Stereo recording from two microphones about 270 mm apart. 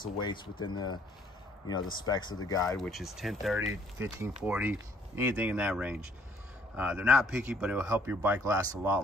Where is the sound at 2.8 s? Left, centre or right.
Centre.